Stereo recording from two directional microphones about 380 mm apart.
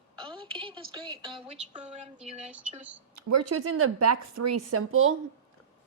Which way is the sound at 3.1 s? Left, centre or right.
Right.